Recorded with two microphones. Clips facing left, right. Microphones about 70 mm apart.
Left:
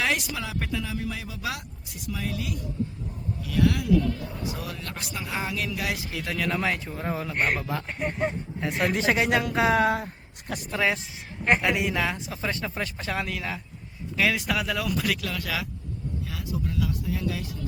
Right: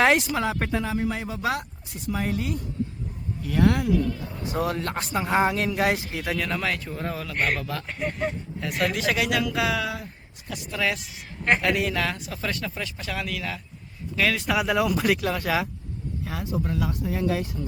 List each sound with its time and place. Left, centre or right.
0.0 s speech: right
4.4 s speech: right
6.3 s a man's voice: centre
6.6 s a woman's voice: centre; by 10.1 s left
10.8 s speech: left
11.4 s a woman's voice: centre; by 13.6 s left
14.2 s a woman's voice: centre
14.4 s speech: centre
14.9 s speech: right